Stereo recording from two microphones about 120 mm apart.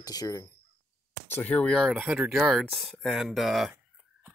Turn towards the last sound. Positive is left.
turn(degrees=0)  # may be behind; listen again after turning